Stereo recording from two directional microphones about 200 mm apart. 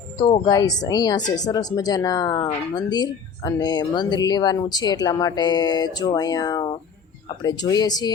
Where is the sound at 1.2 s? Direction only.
40° left (ahead or behind).